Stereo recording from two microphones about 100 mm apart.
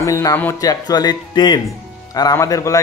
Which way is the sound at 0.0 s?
35° left (ahead or behind).